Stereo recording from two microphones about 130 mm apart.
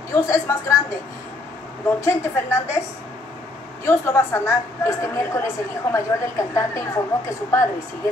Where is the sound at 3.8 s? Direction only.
20° left (ahead or behind).